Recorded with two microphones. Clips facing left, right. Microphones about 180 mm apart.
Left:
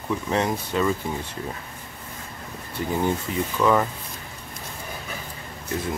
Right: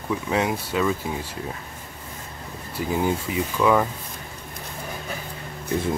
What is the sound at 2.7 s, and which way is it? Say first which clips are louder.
Speech: right 1 dB; 5° right (ahead or behind).